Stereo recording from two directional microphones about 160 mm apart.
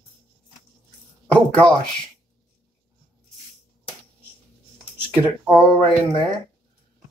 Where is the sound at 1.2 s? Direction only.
5° left (ahead or behind).